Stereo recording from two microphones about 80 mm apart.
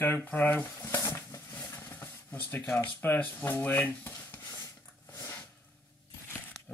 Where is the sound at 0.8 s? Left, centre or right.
Left.